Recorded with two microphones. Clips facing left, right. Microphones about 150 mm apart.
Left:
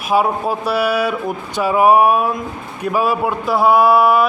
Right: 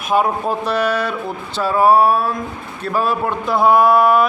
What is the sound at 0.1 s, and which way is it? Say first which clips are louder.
A man's voice: left 1 dB; 5° left (ahead or behind).